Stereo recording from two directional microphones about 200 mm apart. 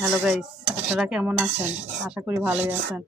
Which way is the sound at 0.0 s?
5° right (ahead or behind).